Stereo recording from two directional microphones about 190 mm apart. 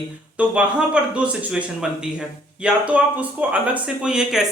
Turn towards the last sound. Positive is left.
turn(degrees=-5)  # may be behind; listen again after turning